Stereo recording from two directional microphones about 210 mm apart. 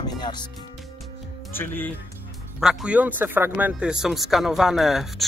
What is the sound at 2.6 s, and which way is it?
Speech, centre (ahead or behind).